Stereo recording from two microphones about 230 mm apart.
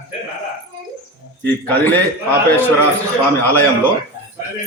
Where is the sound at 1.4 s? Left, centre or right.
Centre.